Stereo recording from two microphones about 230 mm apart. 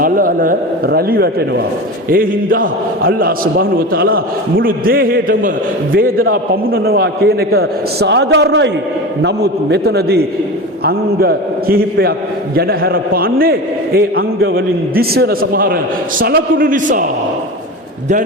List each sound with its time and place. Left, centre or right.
0.0 s a man's voice: right